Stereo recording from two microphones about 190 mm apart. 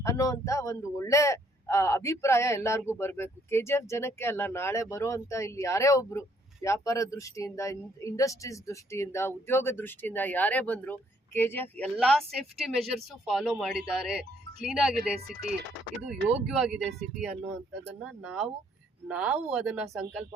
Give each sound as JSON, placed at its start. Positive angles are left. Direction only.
{"t": 0.0, "sound": "speech", "side_deg": 15}